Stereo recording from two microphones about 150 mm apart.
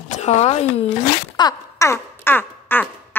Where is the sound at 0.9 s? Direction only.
30° left (ahead or behind).